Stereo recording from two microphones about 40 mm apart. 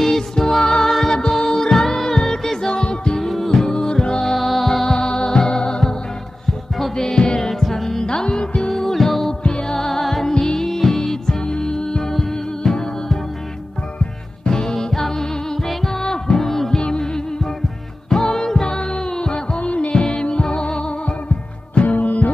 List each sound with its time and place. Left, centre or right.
0.0 s music: centre
3.2 s music: centre
3.6 s music: centre
4.9 s music: left
7.1 s music: left
7.6 s music: centre
8.1 s music: left
8.7 s music: centre
9.4 s music: centre
14.5 s music: centre
16.8 s music: left
21.8 s music: left